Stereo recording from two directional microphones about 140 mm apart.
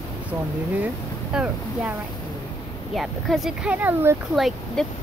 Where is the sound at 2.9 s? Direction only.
Centre (ahead or behind).